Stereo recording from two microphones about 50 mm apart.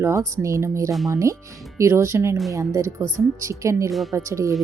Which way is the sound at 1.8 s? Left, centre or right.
Right.